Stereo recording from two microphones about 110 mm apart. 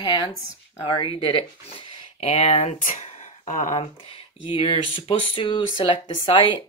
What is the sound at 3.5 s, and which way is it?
Speech, 75° left (ahead or behind).